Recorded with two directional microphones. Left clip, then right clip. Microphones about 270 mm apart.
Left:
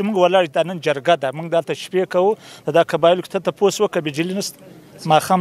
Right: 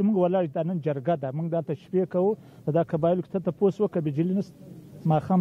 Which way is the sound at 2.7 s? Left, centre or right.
Centre.